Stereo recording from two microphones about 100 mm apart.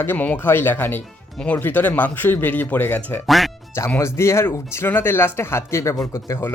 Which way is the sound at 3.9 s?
25° left (ahead or behind).